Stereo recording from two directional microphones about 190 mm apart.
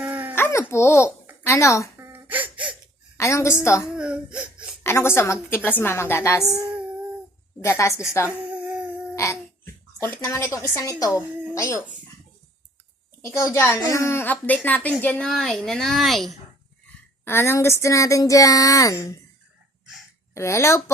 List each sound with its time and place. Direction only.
0.0 s a sound: 10° right (ahead or behind)
0.3 s a child's voice: 15° left (ahead or behind)
2.0 s laughter: 10° right (ahead or behind)
3.2 s speech: 15° left (ahead or behind)
3.8 s speech: 5° right (ahead or behind)
4.8 s speech: 15° left (ahead or behind)
7.6 s speech: 15° left (ahead or behind)
8.6 s a sound: 5° right (ahead or behind)
9.1 s a sound: 15° left (ahead or behind)
10.0 s speech: 10° left (ahead or behind)
13.2 s speech: 15° left (ahead or behind); by 16.2 s centre (ahead or behind)
17.2 s speech: 10° left (ahead or behind)
20.3 s speech: 15° left (ahead or behind)